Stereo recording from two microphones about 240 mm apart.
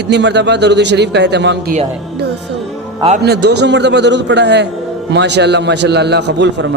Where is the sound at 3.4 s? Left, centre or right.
Right.